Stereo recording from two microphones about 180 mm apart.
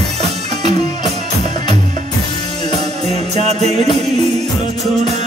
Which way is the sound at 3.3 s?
35° right (ahead or behind).